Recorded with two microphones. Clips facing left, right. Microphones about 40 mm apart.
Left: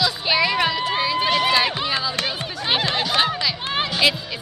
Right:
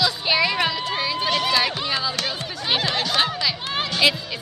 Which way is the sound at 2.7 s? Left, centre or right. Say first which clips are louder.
Left 1 dB; centre.